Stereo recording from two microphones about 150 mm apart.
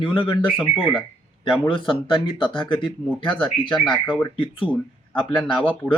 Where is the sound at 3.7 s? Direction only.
5° left (ahead or behind).